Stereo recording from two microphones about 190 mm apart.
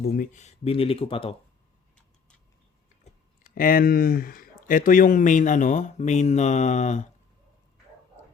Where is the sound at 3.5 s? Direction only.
50° left (ahead or behind).